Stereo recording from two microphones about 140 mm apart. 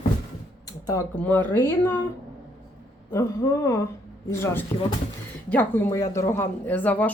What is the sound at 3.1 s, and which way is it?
Speech, 25° left (ahead or behind).